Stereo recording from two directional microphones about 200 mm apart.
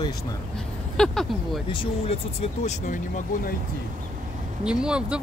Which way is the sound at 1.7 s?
30° left (ahead or behind).